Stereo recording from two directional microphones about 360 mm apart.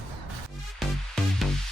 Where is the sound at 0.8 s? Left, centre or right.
Centre.